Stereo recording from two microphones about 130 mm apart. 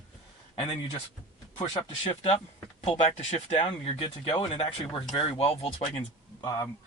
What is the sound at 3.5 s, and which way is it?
Speech, 45° left (ahead or behind).